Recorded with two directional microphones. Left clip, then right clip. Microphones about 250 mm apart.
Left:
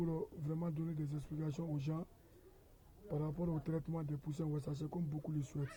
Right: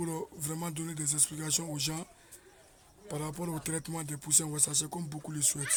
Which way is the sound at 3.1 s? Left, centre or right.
Right.